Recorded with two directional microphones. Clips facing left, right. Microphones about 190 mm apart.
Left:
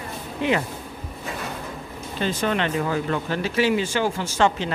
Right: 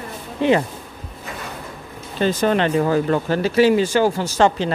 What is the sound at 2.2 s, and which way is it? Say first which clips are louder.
Speech: right 6 dB; 40° right (ahead or behind).